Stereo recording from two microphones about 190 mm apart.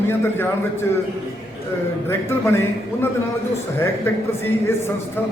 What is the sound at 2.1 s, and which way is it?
Speech, 10° left (ahead or behind).